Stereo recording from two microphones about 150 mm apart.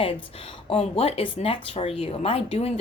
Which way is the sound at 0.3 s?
40° left (ahead or behind).